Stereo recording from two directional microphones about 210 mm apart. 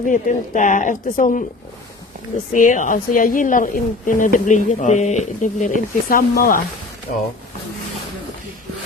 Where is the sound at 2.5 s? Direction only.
40° left (ahead or behind).